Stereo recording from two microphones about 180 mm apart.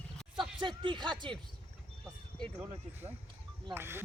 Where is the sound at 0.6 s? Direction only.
25° right (ahead or behind).